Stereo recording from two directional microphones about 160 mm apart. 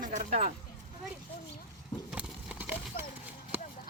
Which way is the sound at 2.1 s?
5° right (ahead or behind).